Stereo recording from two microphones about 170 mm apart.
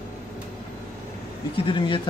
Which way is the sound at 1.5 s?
30° left (ahead or behind).